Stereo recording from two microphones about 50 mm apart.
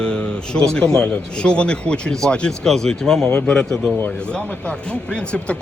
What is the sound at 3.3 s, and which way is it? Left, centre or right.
A man's voice, left.